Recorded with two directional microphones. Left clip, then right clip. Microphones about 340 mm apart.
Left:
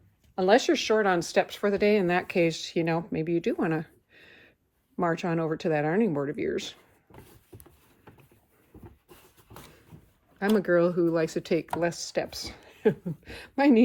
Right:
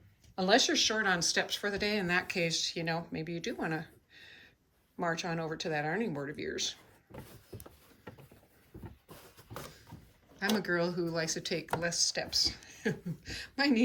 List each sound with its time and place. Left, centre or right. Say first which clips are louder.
0.3 s speech: left 5 dB; centre
10.3 s speech: left 8 dB; centre